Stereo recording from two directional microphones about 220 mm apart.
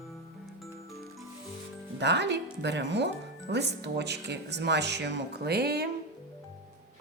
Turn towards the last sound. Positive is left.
turn(degrees=-45)  # may be behind; listen again after turning